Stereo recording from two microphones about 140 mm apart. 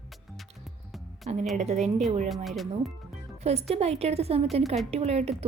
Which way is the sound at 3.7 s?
45° right (ahead or behind).